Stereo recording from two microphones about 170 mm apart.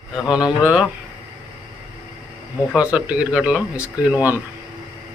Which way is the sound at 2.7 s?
5° right (ahead or behind).